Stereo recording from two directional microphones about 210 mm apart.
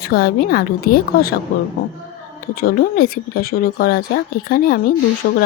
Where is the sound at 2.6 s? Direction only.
45° left (ahead or behind).